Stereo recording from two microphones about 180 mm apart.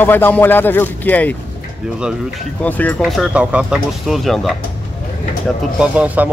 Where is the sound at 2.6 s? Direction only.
10° left (ahead or behind).